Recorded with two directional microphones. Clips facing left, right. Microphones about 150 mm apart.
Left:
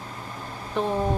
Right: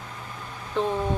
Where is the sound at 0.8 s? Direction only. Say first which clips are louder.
Right 1 dB; 15° left (ahead or behind).